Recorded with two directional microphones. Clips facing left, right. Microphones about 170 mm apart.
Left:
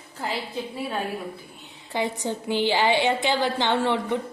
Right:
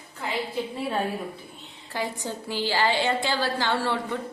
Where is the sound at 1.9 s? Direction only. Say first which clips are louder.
Left 4 dB; 20° left (ahead or behind).